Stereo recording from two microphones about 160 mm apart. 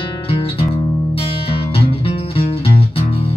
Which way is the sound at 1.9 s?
35° left (ahead or behind).